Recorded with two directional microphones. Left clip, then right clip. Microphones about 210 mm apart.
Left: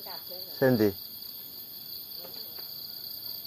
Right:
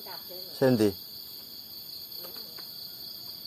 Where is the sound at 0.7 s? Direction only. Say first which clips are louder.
Even; 5° right (ahead or behind).